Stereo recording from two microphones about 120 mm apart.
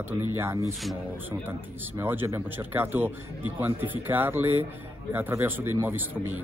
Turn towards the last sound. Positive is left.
turn(degrees=-15)  # may be behind; listen again after turning